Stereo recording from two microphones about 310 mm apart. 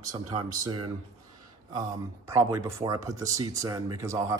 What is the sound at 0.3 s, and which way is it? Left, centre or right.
Speech, centre.